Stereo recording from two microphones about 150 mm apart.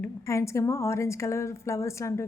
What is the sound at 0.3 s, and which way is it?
A woman's voice, 20° left (ahead or behind).